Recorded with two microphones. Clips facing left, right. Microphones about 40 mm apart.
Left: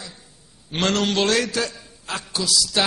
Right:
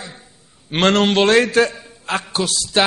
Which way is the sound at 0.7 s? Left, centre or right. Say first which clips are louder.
Right 6 dB; right.